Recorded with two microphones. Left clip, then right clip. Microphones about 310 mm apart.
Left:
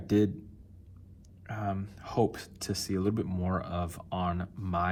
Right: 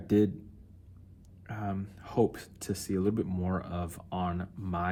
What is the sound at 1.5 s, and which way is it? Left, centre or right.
Speech, centre.